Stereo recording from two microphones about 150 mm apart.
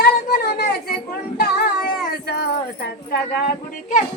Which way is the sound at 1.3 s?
90° left.